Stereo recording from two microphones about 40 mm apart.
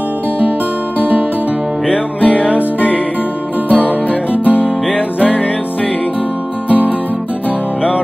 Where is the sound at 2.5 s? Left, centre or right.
Left.